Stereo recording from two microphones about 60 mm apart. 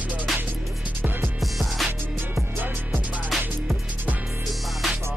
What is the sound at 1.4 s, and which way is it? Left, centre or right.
Music, centre.